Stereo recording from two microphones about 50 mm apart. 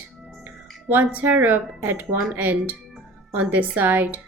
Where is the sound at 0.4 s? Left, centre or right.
Right.